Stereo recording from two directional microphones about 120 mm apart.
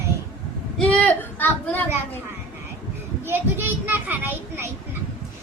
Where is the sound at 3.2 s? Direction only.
20° right (ahead or behind).